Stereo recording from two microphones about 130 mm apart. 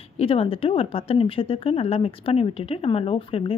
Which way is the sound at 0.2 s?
45° left (ahead or behind).